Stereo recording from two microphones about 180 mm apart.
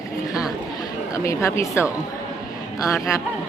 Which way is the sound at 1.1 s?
15° left (ahead or behind).